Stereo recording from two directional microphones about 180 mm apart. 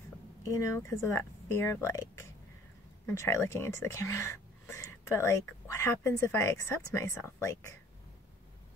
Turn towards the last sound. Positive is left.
turn(degrees=15)  # may be behind; listen again after turning